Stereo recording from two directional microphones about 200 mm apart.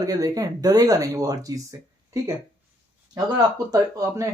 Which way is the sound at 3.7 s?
15° right (ahead or behind).